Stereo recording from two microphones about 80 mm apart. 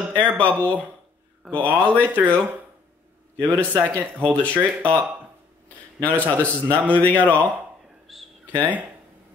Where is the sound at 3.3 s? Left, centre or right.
Right.